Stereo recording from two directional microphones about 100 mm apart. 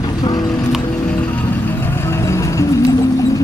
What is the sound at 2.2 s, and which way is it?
Music, 30° left (ahead or behind).